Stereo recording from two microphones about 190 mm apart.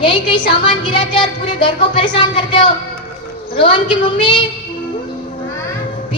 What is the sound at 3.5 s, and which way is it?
Speech, 25° left (ahead or behind).